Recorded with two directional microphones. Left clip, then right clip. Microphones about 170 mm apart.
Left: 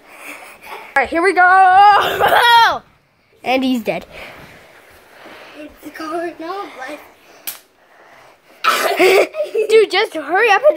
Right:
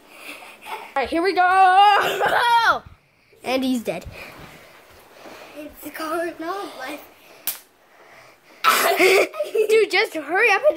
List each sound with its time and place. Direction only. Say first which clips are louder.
0.9 s speech: left 7 dB; centre (ahead or behind)
1.3 s speech: left 7 dB; 10° left (ahead or behind)
1.6 s speech: left 3 dB; 5° right (ahead or behind)
2.1 s speech: left 7 dB; 25° left (ahead or behind)
3.4 s speech: left 6 dB; 10° left (ahead or behind)
6.4 s speech: left 3 dB; 30° right (ahead or behind)
8.5 s cough: left 2 dB; 35° right (ahead or behind)
8.9 s cough: left 4 dB; 15° left (ahead or behind)
9.5 s speech: left 5 dB; 15° left (ahead or behind)